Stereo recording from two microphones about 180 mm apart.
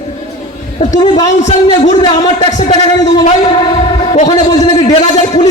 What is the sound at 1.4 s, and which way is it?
Speech, 40° left (ahead or behind).